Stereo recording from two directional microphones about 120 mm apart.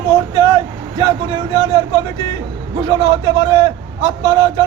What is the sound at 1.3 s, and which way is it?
A man's voice, 40° right (ahead or behind).